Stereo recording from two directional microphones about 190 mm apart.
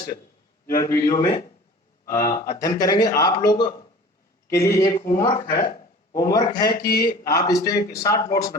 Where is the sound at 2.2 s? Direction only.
15° left (ahead or behind).